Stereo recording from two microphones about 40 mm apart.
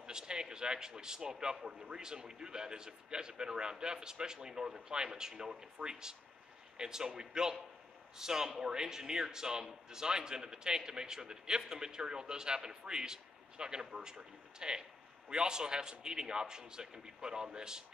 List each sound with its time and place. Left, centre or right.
0.0 s speech: centre